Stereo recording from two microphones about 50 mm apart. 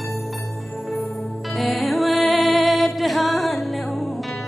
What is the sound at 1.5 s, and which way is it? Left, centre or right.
Music, centre.